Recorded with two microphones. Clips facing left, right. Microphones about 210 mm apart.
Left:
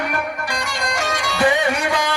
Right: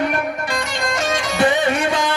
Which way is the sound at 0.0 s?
25° right (ahead or behind).